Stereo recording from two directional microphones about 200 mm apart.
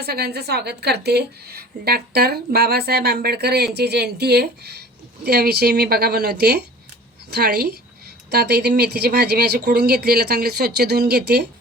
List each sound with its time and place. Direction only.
0.0 s a woman's voice: 50° right (ahead or behind)